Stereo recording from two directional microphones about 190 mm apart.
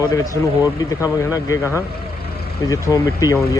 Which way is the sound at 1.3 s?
15° left (ahead or behind).